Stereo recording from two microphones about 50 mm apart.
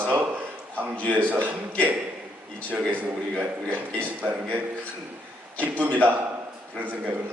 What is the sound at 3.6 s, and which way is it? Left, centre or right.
Speech, right.